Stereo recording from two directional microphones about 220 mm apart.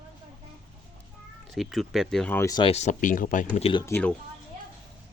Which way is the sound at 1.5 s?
Centre (ahead or behind).